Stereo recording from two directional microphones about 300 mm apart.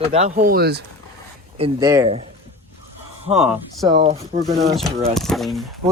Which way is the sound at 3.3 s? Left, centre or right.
Centre.